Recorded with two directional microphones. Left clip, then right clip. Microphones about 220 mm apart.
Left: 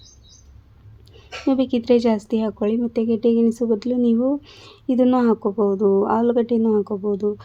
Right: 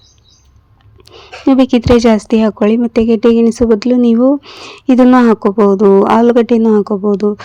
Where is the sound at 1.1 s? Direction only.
25° right (ahead or behind).